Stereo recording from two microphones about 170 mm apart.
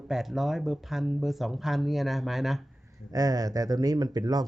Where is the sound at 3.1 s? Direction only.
20° right (ahead or behind).